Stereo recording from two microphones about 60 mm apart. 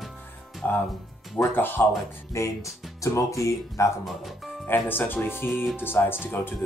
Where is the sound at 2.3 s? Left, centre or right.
Left.